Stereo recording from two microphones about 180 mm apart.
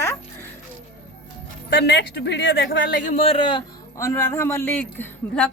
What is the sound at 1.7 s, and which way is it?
Speech, 70° left (ahead or behind).